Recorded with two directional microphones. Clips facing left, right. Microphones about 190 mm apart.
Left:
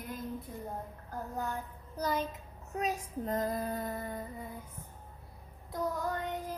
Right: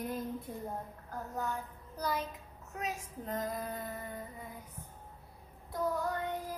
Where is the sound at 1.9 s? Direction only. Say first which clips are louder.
Left 3 dB; 20° left (ahead or behind).